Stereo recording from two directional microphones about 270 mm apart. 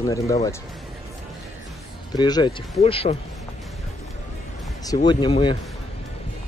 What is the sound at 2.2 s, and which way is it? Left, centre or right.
Speech, centre.